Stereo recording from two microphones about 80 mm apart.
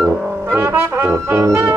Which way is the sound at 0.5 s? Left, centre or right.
Right.